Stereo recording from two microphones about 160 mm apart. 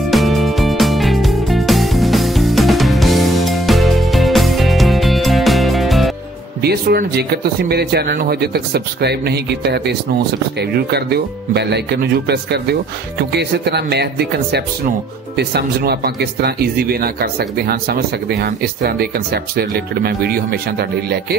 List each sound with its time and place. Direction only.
0.1 s music: centre (ahead or behind)
6.6 s speech: 80° right